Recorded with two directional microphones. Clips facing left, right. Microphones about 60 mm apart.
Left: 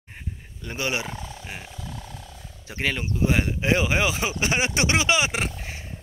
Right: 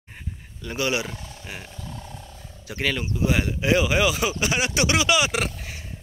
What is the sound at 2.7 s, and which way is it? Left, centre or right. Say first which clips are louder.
Speech: right 1 dB; left.